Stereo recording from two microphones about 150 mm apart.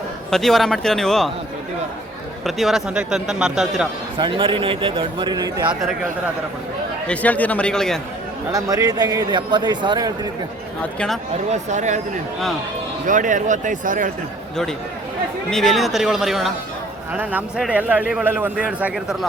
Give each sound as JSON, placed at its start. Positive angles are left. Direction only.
{"t": 0.3, "sound": "a man's voice", "side_deg": 0}
{"t": 2.4, "sound": "a man's voice", "side_deg": 0}
{"t": 4.2, "sound": "a man's voice", "side_deg": -35}
{"t": 7.1, "sound": "a man's voice", "side_deg": 10}
{"t": 8.5, "sound": "a man's voice", "side_deg": -25}
{"t": 11.5, "sound": "speech", "side_deg": -55}
{"t": 13.1, "sound": "speech", "side_deg": -60}
{"t": 15.4, "sound": "a man's voice", "side_deg": 0}
{"t": 17.6, "sound": "a man's voice", "side_deg": -10}